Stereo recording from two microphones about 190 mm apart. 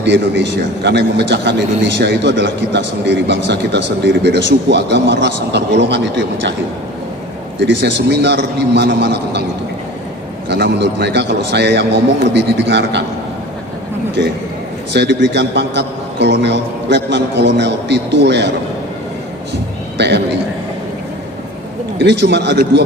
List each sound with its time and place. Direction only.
0.0 s a man's voice: 70° right (ahead or behind)
7.6 s a man's voice: 70° right (ahead or behind)
10.5 s a man's voice: 60° right (ahead or behind)
14.2 s a man's voice: 65° right (ahead or behind)
20.0 s a man's voice: 65° right (ahead or behind)
21.9 s a man's voice: 65° right (ahead or behind)